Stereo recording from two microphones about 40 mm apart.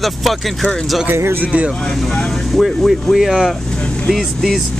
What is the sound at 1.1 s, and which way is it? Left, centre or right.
Speech, right.